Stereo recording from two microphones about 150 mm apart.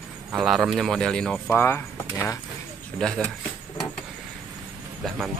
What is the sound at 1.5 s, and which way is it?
Speech, 15° left (ahead or behind).